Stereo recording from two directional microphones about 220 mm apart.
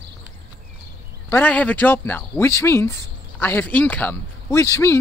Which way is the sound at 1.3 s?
5° left (ahead or behind).